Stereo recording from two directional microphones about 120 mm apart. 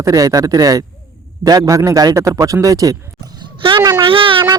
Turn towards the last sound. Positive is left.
turn(degrees=-45)  # may be behind; listen again after turning